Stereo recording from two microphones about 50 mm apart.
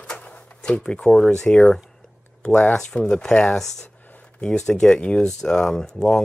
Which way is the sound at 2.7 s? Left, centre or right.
Centre.